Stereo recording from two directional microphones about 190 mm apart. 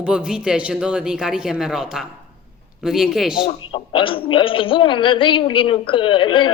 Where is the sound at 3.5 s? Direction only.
30° left (ahead or behind).